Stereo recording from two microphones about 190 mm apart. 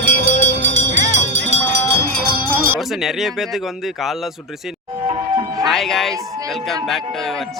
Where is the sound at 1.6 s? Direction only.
10° left (ahead or behind).